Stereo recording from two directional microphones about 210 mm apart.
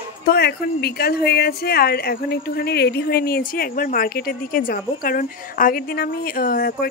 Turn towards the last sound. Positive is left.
turn(degrees=45)  # may be behind; listen again after turning